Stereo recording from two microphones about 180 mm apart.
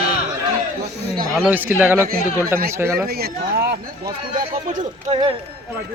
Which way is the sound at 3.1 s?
60° right (ahead or behind).